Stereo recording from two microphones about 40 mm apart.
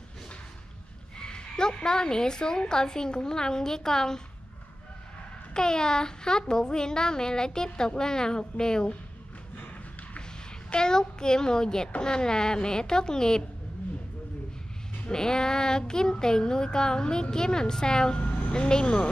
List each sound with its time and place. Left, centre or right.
1.1 s child singing: centre
5.5 s speech: centre
10.7 s child singing: centre
15.0 s child singing: centre
18.5 s speech: centre